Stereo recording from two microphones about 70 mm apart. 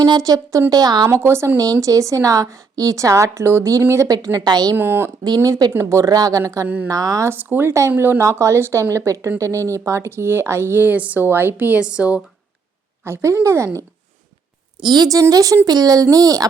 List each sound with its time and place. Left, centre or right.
0.0 s speech: right
0.7 s a woman's voice: right
1.0 s speech: right
1.5 s a woman's voice: right
4.1 s speech: right
4.4 s a woman's voice: right
4.8 s a woman's voice: right
6.1 s speech: right
7.3 s speech: right
7.7 s speech: right
8.2 s a woman's voice: right; by 12.2 s centre
13.1 s speech: right
14.8 s speech: right
15.6 s speech: right